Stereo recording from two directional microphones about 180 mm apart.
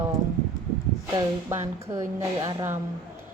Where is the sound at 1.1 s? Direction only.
15° right (ahead or behind).